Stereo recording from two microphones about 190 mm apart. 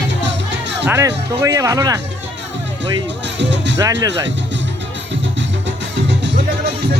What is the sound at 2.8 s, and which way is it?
Speech, 65° right (ahead or behind).